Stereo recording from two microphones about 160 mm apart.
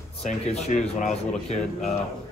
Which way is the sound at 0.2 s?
45° left (ahead or behind).